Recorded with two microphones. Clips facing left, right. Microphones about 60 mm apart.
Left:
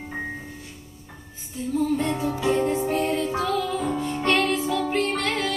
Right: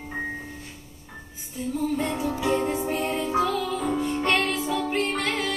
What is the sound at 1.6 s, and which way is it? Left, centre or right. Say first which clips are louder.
Music: left 3 dB; centre.